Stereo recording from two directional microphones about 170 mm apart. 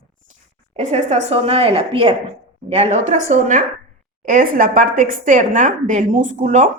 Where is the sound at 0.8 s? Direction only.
45° right (ahead or behind).